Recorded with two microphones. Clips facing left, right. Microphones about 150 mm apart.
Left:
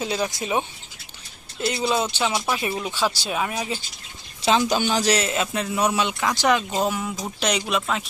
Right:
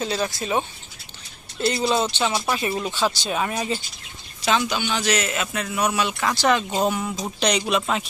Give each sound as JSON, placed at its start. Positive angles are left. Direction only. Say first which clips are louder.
{"t": 0.0, "sound": "speech", "louder": "even", "side_deg": 15}
{"t": 1.6, "sound": "speech", "louder": "right 2 dB", "side_deg": 5}
{"t": 4.4, "sound": "a man's voice", "louder": "left 3 dB", "side_deg": 35}
{"t": 6.2, "sound": "speech", "louder": "even", "side_deg": 15}
{"t": 6.7, "sound": "speech", "louder": "right 1 dB", "side_deg": 0}
{"t": 7.8, "sound": "speech", "louder": "right 2 dB", "side_deg": -5}